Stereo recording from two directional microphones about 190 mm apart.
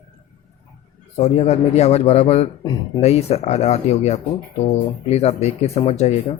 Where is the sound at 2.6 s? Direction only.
20° left (ahead or behind).